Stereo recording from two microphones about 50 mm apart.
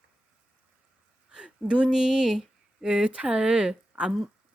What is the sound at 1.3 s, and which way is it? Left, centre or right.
Speech, centre.